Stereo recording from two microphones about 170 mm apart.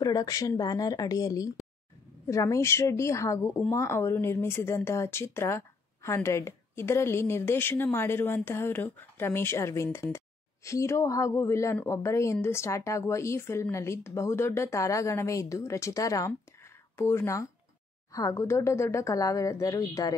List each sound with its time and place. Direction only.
0.0 s a woman's voice: 20° left (ahead or behind)